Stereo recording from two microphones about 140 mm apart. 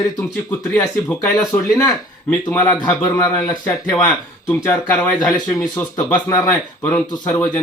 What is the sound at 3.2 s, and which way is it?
Speech, 25° left (ahead or behind).